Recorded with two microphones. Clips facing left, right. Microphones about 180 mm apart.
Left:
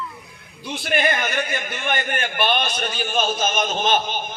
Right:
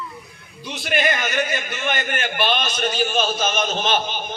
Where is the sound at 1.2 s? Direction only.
55° left (ahead or behind).